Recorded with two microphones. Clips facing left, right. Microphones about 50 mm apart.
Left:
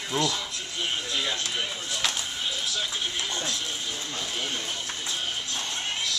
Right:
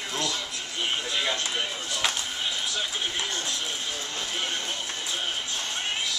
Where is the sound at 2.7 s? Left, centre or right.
Centre.